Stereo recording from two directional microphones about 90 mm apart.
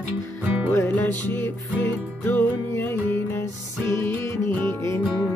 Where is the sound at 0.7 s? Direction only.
25° left (ahead or behind).